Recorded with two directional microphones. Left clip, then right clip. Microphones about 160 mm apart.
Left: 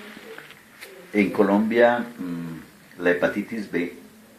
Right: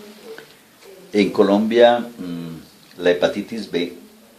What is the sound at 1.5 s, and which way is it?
Speech, 30° right (ahead or behind).